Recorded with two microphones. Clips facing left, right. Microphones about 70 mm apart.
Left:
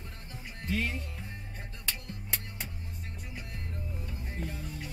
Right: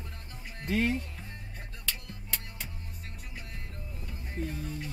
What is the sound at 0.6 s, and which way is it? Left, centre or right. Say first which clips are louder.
Speech: right 4 dB; right.